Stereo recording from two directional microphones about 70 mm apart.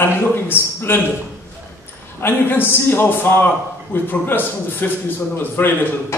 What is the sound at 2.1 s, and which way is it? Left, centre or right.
A man's voice, left.